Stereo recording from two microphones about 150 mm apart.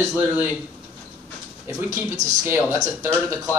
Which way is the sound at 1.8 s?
20° right (ahead or behind).